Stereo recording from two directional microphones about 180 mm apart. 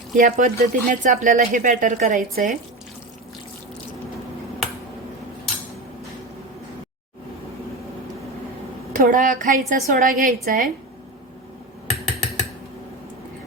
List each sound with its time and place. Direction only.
0.2 s speech: 45° right (ahead or behind)
9.0 s speech: 45° right (ahead or behind)
11.9 s typing: centre (ahead or behind)